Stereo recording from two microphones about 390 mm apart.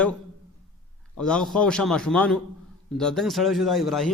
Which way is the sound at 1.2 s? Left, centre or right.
Centre.